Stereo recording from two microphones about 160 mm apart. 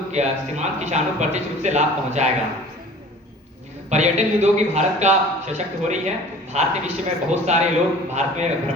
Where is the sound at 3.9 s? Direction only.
45° right (ahead or behind).